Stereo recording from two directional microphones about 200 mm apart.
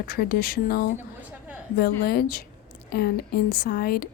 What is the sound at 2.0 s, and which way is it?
A woman's voice, 50° left (ahead or behind).